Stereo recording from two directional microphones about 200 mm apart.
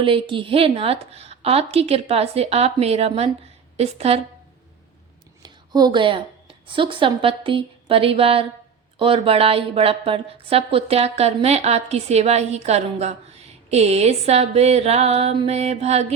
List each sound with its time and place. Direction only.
0.0 s a woman's voice: 25° right (ahead or behind)
5.4 s a woman's voice: 20° right (ahead or behind)